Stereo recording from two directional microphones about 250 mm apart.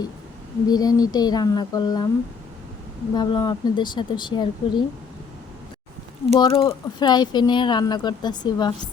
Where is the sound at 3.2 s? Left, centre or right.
Centre.